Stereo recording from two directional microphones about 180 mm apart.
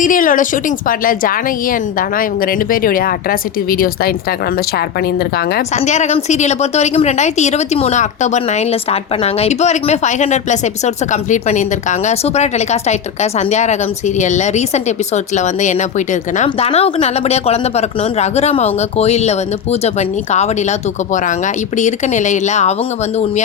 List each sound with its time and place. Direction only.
0.0 s a woman's voice: 50° left (ahead or behind)
5.7 s speech: 40° left (ahead or behind)